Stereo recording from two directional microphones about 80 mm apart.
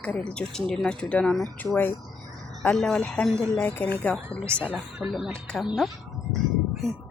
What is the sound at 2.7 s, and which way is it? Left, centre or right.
Speech, centre.